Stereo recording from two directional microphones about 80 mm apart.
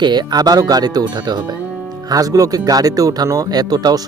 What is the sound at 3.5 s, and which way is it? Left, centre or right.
Speech, right.